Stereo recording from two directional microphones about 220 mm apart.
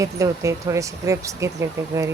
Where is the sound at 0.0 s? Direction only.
15° right (ahead or behind).